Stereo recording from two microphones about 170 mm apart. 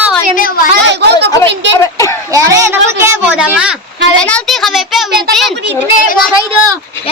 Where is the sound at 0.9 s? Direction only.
85° right.